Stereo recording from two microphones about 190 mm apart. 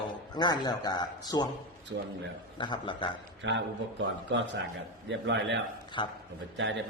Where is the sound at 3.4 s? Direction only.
70° right (ahead or behind).